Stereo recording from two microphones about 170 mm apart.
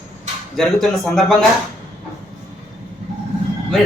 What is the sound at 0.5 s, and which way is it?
Speech, centre (ahead or behind).